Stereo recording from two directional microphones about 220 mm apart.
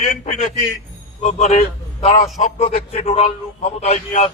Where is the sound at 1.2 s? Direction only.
30° left (ahead or behind).